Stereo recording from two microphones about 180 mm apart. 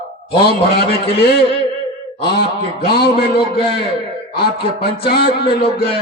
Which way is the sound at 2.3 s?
60° left (ahead or behind).